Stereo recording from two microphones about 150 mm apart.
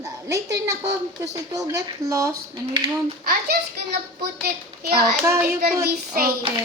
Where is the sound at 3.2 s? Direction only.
90° right.